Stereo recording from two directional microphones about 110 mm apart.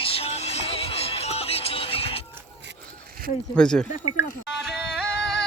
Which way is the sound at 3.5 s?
10° left (ahead or behind).